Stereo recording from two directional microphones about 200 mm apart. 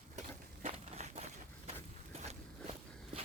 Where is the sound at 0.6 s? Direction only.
35° right (ahead or behind).